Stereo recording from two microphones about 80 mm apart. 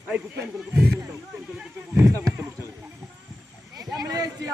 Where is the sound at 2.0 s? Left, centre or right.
Right.